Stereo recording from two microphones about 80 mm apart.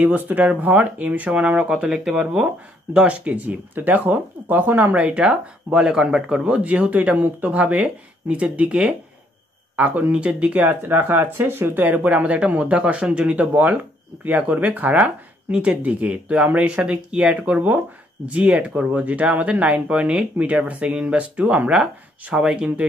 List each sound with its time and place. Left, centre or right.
0.0 s speech: right
4.9 s speech: centre